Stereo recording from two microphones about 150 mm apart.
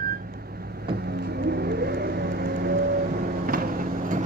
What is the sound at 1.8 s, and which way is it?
Vehicle, 90° right.